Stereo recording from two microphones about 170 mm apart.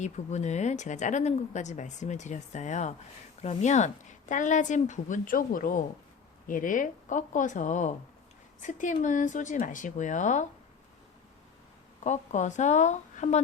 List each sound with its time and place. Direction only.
0.0 s speech: 45° left (ahead or behind)
12.0 s speech: 45° left (ahead or behind)